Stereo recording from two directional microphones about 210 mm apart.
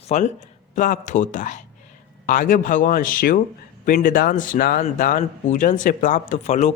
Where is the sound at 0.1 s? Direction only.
35° left (ahead or behind).